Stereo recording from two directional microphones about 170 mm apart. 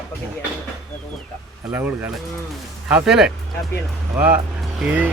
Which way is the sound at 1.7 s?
10° right (ahead or behind).